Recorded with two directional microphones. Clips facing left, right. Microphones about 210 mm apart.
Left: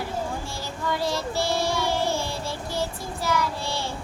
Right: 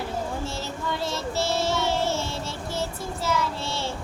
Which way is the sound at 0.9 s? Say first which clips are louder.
Left 2 dB; 25° right (ahead or behind).